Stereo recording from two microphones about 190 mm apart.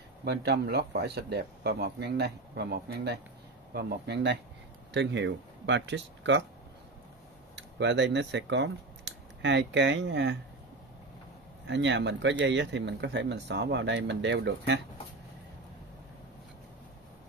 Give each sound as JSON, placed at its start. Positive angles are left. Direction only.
{"t": 0.2, "sound": "speech", "side_deg": -60}
{"t": 7.5, "sound": "speech", "side_deg": -65}
{"t": 11.6, "sound": "speech", "side_deg": -70}